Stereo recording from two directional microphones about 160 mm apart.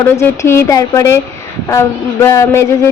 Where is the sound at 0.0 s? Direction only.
15° left (ahead or behind).